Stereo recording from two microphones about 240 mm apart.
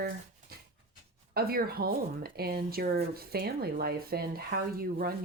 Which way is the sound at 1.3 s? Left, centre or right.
Right.